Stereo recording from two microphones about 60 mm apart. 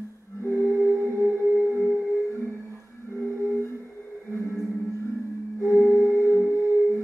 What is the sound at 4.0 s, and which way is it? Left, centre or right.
Music, left.